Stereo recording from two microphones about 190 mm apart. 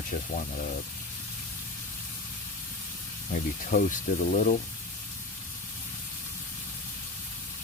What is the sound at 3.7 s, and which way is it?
Speech, 45° left (ahead or behind).